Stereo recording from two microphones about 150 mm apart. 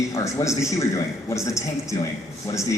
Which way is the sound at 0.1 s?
20° left (ahead or behind).